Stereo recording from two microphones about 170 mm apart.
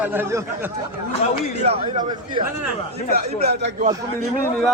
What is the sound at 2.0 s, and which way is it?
Speech, 25° right (ahead or behind).